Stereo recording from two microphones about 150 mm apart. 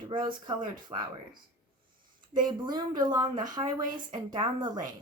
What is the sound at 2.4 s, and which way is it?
Speech, 30° right (ahead or behind).